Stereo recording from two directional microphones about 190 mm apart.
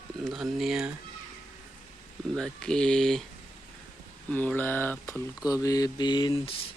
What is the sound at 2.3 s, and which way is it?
Speech, 5° left (ahead or behind).